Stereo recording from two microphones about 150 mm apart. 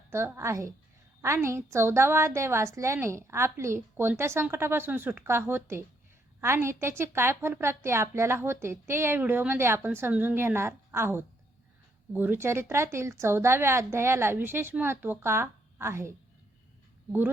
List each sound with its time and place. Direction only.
0.1 s a woman's voice: 15° right (ahead or behind)